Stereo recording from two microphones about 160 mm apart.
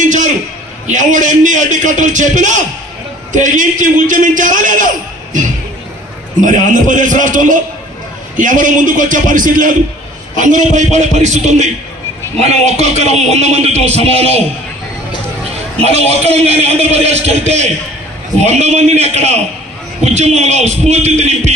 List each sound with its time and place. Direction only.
0.0 s a sound: 50° right (ahead or behind)
0.9 s a man's voice: 50° right (ahead or behind)
6.4 s a man's voice: 55° right (ahead or behind)
15.8 s a man's voice: 40° right (ahead or behind)